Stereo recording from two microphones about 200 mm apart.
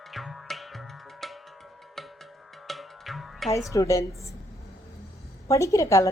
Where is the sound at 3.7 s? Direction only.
15° left (ahead or behind).